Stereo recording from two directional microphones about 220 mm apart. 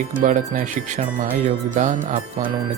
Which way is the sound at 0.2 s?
35° right (ahead or behind).